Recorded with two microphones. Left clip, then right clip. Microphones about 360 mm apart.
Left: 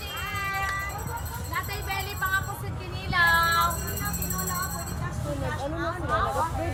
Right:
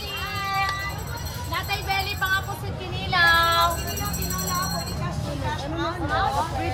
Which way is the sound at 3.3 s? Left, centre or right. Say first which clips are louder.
Right 3 dB; centre.